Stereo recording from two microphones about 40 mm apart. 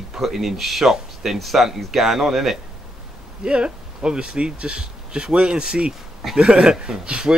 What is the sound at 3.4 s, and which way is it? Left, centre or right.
Speech, right.